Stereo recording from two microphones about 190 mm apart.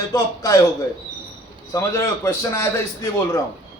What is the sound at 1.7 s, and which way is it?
A man's voice, 15° left (ahead or behind).